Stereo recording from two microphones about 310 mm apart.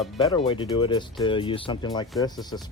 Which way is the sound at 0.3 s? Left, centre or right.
Centre.